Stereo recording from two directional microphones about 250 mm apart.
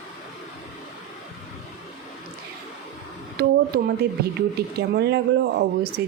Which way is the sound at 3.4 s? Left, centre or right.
Right.